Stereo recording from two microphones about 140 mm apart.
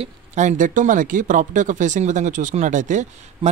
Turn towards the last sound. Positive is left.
turn(degrees=-60)  # may be behind; listen again after turning